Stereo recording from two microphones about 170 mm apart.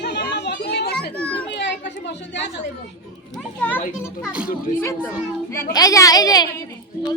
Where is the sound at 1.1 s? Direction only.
10° left (ahead or behind).